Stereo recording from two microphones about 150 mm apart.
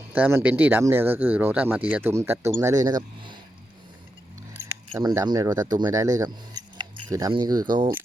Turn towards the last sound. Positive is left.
turn(degrees=-30)  # may be behind; listen again after turning